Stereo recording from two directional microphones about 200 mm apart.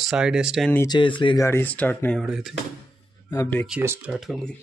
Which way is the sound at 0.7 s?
15° left (ahead or behind).